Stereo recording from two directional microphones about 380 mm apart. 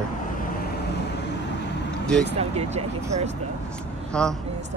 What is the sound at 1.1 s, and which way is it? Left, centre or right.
Vehicle, left.